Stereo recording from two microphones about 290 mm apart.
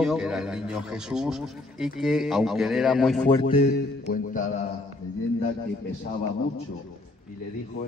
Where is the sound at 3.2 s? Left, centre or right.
Centre.